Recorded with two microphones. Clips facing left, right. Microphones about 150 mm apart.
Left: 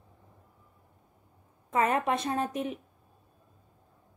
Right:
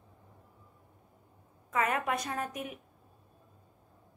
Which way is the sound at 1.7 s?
30° left (ahead or behind).